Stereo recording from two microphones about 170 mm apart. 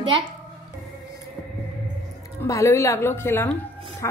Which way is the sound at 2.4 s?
15° left (ahead or behind).